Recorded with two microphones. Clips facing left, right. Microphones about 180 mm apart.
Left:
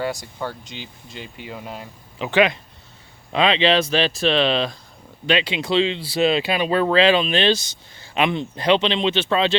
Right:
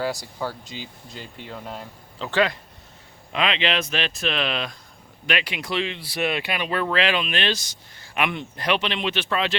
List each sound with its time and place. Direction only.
0.0 s speech: centre (ahead or behind)
2.1 s speech: 15° left (ahead or behind)
3.3 s speech: 30° left (ahead or behind)